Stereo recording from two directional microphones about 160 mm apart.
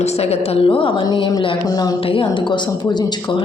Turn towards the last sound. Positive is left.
turn(degrees=30)  # may be behind; listen again after turning